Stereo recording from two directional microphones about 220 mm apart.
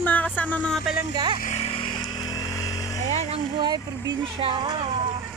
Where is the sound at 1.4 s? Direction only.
30° left (ahead or behind).